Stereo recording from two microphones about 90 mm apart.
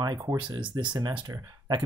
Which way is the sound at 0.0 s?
40° right (ahead or behind).